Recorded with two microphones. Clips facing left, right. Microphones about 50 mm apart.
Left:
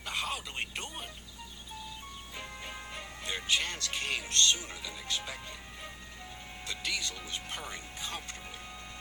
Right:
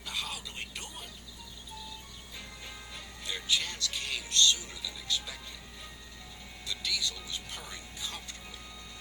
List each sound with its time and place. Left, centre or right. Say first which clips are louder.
0.0 s speech: left 3 dB; left
2.6 s speech: left 3 dB; left
6.7 s speech: right 1 dB; left